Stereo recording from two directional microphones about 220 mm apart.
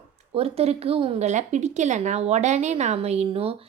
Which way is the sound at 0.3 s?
25° right (ahead or behind).